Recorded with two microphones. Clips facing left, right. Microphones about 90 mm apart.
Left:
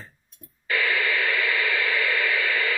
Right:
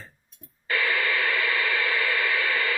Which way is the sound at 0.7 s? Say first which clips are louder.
Left 1 dB; 35° right (ahead or behind).